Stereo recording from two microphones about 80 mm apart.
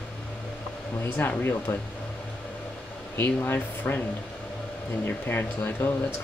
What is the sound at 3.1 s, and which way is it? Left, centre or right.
Speech, left.